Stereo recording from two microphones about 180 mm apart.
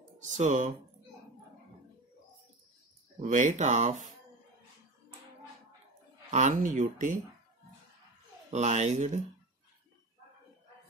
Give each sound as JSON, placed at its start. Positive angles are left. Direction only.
{"t": 0.3, "sound": "speech", "side_deg": -40}
{"t": 3.2, "sound": "speech", "side_deg": -40}
{"t": 6.3, "sound": "speech", "side_deg": -40}
{"t": 8.5, "sound": "speech", "side_deg": -40}